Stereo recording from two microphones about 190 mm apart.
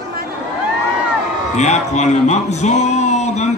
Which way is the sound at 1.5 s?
35° left (ahead or behind).